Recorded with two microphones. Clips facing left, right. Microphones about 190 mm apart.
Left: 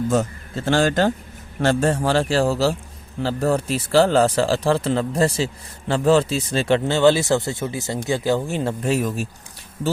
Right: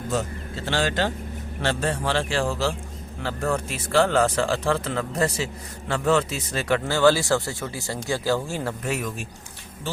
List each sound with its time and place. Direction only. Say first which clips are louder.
0.1 s speech: left 6 dB; 45° left (ahead or behind)